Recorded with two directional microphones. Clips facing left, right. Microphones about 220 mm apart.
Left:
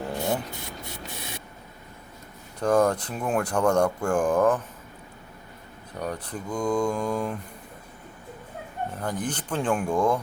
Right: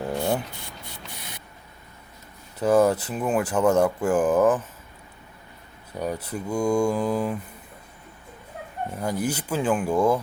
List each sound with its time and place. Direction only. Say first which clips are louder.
0.3 s spray: right 2 dB; 20° left (ahead or behind)
2.6 s speech: right 2 dB; 5° right (ahead or behind)
6.0 s speech: right 3 dB; 5° right (ahead or behind)
9.0 s speech: right 5 dB; 10° right (ahead or behind)